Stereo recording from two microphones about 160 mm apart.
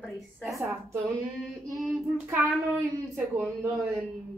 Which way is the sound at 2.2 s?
10° right (ahead or behind).